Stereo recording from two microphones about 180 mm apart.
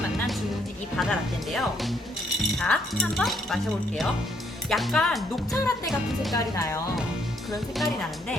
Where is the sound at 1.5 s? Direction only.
Centre (ahead or behind).